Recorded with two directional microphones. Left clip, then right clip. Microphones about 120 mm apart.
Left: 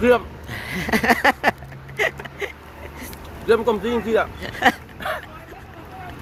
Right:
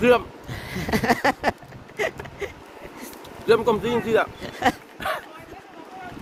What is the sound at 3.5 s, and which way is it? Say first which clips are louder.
Speech: left 1 dB; 50° right (ahead or behind).